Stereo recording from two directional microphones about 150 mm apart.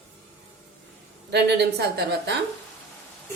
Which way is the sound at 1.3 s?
90° right.